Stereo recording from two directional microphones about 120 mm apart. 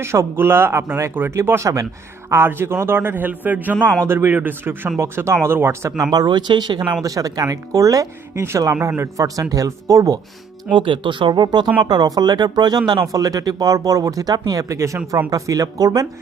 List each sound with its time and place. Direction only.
0.0 s a man's voice: 20° right (ahead or behind)
6.1 s speech: 35° right (ahead or behind)
10.7 s speech: 45° right (ahead or behind)